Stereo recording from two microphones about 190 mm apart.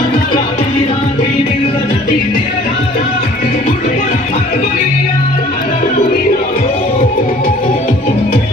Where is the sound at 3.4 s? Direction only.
40° left (ahead or behind).